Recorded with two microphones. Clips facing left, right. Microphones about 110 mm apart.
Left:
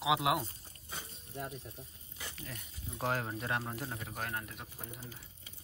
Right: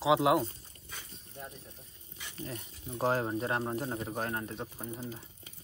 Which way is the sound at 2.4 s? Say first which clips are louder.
Right 6 dB; 30° right (ahead or behind).